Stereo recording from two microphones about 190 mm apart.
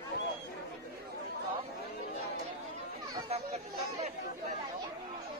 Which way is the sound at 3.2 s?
35° right (ahead or behind).